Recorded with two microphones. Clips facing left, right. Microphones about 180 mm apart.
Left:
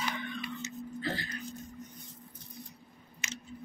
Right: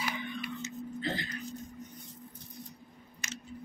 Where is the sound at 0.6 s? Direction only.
20° right (ahead or behind).